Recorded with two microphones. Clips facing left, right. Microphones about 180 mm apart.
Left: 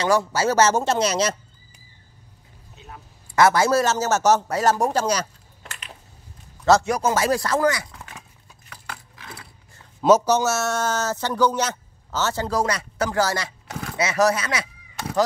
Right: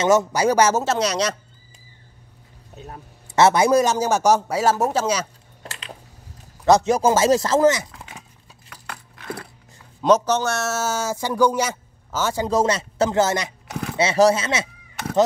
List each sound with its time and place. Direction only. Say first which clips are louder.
0.0 s speech: right 3 dB; 20° right (ahead or behind)
0.8 s speech: even; centre (ahead or behind)
2.7 s a sound: right 5 dB; 40° right (ahead or behind)
3.3 s speech: right 2 dB; 20° right (ahead or behind); by 5.3 s 5° right (ahead or behind)
6.6 s speech: right 2 dB; 20° right (ahead or behind)
10.0 s speech: left 1 dB; 10° left (ahead or behind); by 13.5 s 20° right (ahead or behind)
13.7 s a sound: right 4 dB; centre (ahead or behind)
13.9 s speech: right 4 dB; 30° right (ahead or behind)